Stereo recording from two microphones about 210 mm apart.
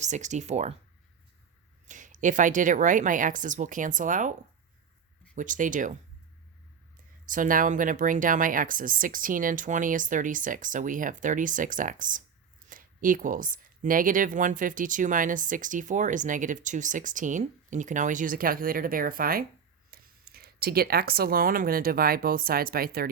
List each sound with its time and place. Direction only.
0.0 s speech: 35° right (ahead or behind)
1.9 s speech: 40° right (ahead or behind)
7.3 s speech: 40° right (ahead or behind)